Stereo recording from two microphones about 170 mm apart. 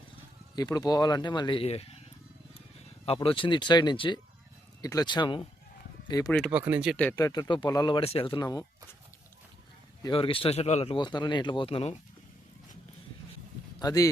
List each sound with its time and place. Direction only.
0.5 s speech: 20° left (ahead or behind)
3.2 s speech: 30° left (ahead or behind)
6.5 s speech: 10° right (ahead or behind)
6.9 s speech: 10° left (ahead or behind)
7.2 s speech: 20° left (ahead or behind)
10.0 s speech: 30° left (ahead or behind)
10.9 s speech: 25° left (ahead or behind)
13.7 s speech: 20° left (ahead or behind)